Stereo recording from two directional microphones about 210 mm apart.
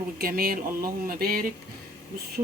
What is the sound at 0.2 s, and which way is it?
Speech, 45° right (ahead or behind).